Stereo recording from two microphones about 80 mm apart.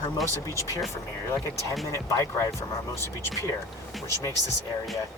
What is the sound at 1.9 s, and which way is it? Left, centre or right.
Speech, left.